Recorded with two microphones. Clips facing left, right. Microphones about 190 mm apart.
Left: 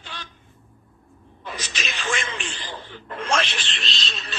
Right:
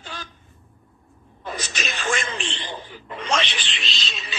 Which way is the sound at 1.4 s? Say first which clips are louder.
Right 3 dB; 45° right (ahead or behind).